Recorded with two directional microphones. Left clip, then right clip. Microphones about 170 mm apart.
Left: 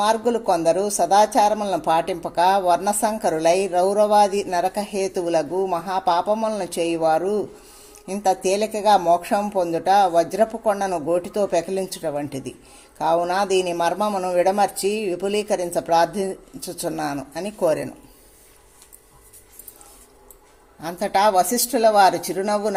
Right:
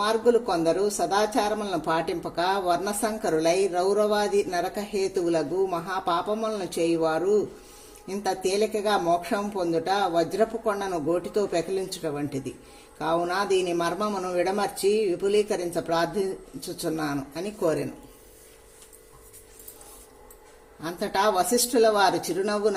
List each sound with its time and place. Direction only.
0.0 s speech: 40° left (ahead or behind)
20.8 s speech: 35° left (ahead or behind)